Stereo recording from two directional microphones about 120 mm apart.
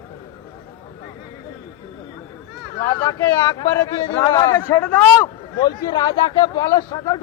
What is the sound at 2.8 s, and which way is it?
Speech, 25° left (ahead or behind).